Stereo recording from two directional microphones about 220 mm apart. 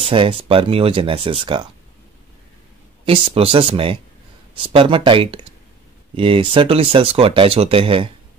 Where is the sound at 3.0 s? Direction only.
25° right (ahead or behind).